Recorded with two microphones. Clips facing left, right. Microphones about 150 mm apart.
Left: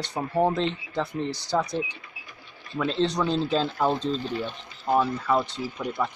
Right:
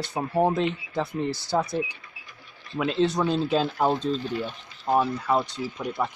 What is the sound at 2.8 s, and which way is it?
Speech, 5° right (ahead or behind).